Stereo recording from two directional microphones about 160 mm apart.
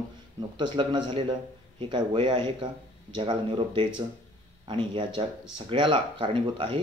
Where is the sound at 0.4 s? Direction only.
30° right (ahead or behind).